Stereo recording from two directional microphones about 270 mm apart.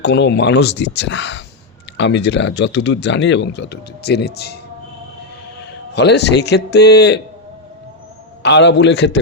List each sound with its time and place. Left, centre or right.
0.0 s speech: left
5.9 s speech: left
8.4 s speech: left